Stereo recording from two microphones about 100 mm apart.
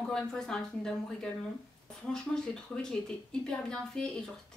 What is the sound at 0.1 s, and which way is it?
Speech, 5° left (ahead or behind).